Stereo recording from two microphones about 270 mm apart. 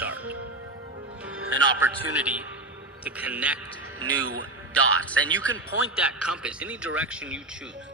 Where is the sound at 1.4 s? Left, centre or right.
Right.